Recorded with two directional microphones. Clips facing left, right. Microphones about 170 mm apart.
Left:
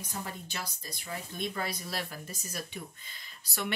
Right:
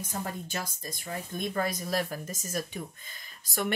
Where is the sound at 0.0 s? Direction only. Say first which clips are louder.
Right 4 dB; 45° right (ahead or behind).